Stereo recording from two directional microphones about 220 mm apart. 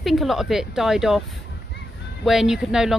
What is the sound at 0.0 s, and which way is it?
Speech, centre (ahead or behind).